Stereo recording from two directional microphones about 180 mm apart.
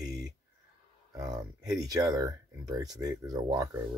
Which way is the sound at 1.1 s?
20° right (ahead or behind).